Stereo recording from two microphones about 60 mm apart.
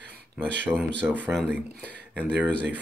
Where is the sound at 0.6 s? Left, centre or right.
Right.